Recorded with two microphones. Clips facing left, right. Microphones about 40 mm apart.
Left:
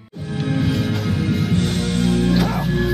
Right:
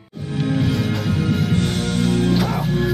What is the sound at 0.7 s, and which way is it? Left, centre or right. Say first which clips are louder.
Music: even; centre.